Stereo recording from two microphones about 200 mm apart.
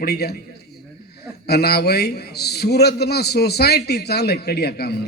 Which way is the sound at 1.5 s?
55° left (ahead or behind).